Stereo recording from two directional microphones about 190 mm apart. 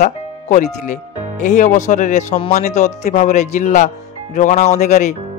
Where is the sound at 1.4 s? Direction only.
40° left (ahead or behind).